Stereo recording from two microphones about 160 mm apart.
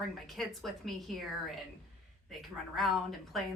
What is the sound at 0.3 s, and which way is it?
A woman's voice, centre (ahead or behind).